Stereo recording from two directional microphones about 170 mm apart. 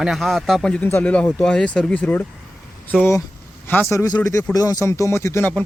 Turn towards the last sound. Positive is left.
turn(degrees=10)  # may be behind; listen again after turning